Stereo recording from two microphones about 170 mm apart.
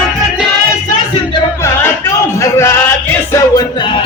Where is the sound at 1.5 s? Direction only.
15° left (ahead or behind).